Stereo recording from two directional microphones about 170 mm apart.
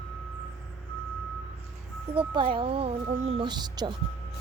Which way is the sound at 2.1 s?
30° right (ahead or behind).